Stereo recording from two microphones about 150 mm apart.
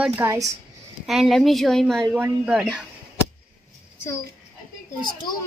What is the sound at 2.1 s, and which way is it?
Speech, 10° right (ahead or behind).